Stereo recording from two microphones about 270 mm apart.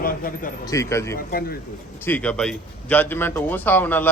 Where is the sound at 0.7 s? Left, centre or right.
Centre.